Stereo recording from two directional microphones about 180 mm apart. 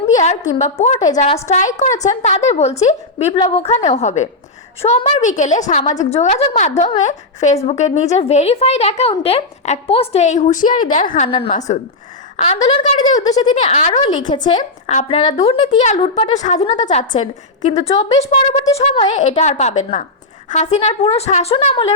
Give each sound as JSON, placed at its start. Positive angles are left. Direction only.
{"t": 0.6, "sound": "a woman's voice", "side_deg": 35}
{"t": 0.9, "sound": "speech", "side_deg": 20}
{"t": 1.5, "sound": "a woman's voice", "side_deg": 40}
{"t": 11.3, "sound": "a woman's voice", "side_deg": 30}
{"t": 13.1, "sound": "speech", "side_deg": 20}
{"t": 13.7, "sound": "a woman's voice", "side_deg": 40}
{"t": 14.2, "sound": "speech", "side_deg": 25}
{"t": 14.8, "sound": "a woman's voice", "side_deg": 35}